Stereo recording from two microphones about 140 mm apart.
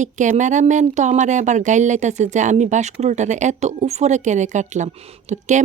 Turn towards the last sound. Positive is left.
turn(degrees=-55)  # may be behind; listen again after turning